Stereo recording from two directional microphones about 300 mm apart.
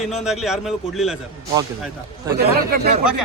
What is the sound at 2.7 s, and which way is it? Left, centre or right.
Speech, right.